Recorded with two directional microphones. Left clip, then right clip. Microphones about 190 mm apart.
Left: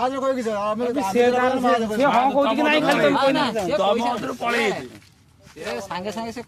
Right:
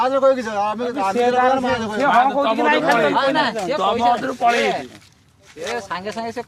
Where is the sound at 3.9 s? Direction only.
45° left (ahead or behind).